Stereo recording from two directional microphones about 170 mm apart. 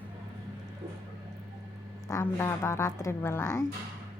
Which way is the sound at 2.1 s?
15° left (ahead or behind).